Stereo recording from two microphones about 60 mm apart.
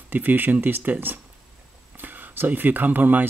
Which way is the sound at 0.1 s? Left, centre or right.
Right.